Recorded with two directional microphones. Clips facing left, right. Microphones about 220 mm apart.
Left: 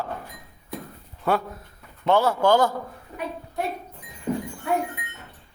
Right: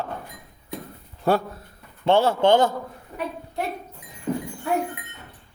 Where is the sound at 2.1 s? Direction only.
25° right (ahead or behind).